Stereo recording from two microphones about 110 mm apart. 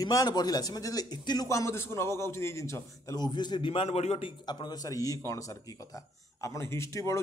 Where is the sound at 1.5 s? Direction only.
25° left (ahead or behind); by 3.8 s 45° left (ahead or behind).